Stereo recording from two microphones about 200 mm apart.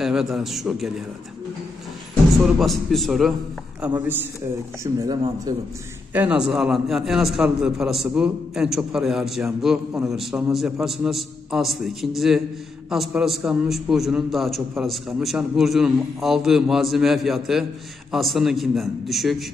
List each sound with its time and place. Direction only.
0.0 s a man's voice: centre (ahead or behind)
2.6 s a man's voice: centre (ahead or behind)
4.8 s speech: 20° right (ahead or behind)
6.1 s a man's voice: 5° right (ahead or behind)